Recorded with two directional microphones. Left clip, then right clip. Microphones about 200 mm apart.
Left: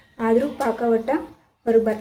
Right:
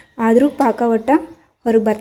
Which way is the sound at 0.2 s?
45° right (ahead or behind).